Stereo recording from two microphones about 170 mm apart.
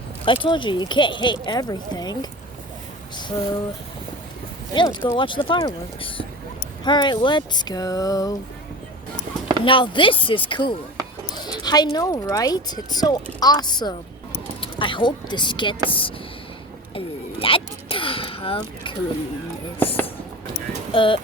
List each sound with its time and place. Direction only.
0.3 s speech: 30° left (ahead or behind)
3.2 s speech: 25° left (ahead or behind)
4.7 s speech: 25° left (ahead or behind)
9.6 s speech: 30° left (ahead or behind)
17.4 s a sound: 30° left (ahead or behind)
20.9 s speech: 30° left (ahead or behind)